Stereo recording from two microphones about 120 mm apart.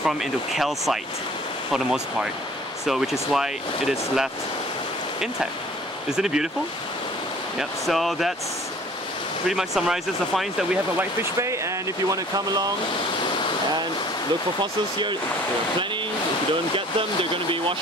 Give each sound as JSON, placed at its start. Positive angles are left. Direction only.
{"t": 0.0, "sound": "speech", "side_deg": 0}
{"t": 6.0, "sound": "speech", "side_deg": -5}
{"t": 7.5, "sound": "speech", "side_deg": 0}
{"t": 9.5, "sound": "speech", "side_deg": -5}
{"t": 11.0, "sound": "speech", "side_deg": -25}
{"t": 14.6, "sound": "speech", "side_deg": -40}
{"t": 16.7, "sound": "speech", "side_deg": -45}